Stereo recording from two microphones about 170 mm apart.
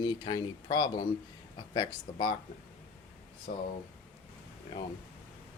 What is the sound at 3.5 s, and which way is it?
Speech, 55° left (ahead or behind).